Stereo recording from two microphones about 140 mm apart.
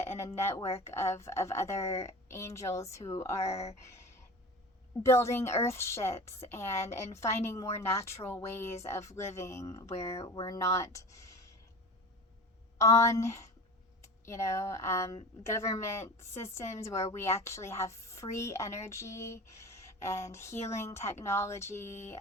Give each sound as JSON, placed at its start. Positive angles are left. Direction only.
{"t": 0.0, "sound": "speech", "side_deg": 20}
{"t": 3.5, "sound": "speech", "side_deg": 50}
{"t": 5.0, "sound": "speech", "side_deg": 20}
{"t": 12.8, "sound": "speech", "side_deg": 20}